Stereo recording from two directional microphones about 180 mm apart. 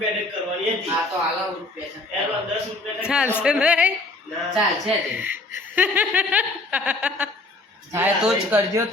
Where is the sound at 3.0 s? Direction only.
5° right (ahead or behind).